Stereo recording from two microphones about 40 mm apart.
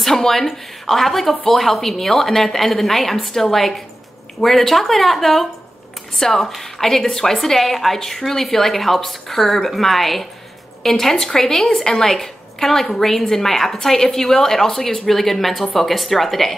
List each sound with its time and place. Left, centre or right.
0.0 s a woman's voice: centre